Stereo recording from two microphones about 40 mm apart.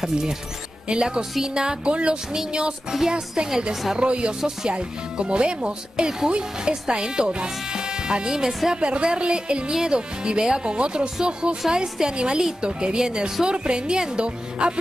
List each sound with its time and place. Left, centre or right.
0.0 s speech: centre
2.9 s speech: centre
4.0 s speech: right